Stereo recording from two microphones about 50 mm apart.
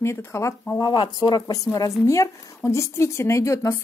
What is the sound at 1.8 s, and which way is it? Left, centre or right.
A woman's voice, left.